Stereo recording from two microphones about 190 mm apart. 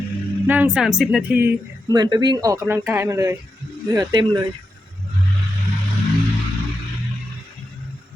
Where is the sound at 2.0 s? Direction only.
20° right (ahead or behind).